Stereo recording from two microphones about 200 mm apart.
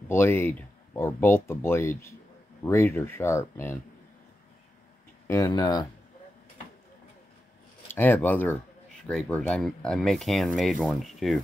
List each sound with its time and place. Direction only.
0.1 s speech: 10° left (ahead or behind)
5.3 s speech: 15° left (ahead or behind)
7.9 s speech: 10° left (ahead or behind)